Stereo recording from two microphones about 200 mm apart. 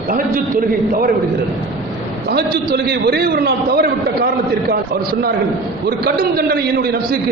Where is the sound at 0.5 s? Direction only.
45° right (ahead or behind).